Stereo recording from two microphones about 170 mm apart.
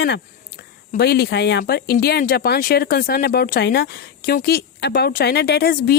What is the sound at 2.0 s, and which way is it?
A woman's voice, 65° left (ahead or behind).